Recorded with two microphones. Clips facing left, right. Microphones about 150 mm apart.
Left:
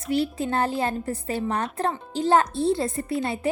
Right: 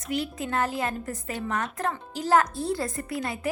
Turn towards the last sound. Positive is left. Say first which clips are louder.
# left 5 dB
turn(degrees=25)  # may be behind; listen again after turning